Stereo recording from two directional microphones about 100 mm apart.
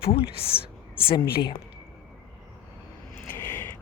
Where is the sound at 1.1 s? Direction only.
50° left (ahead or behind).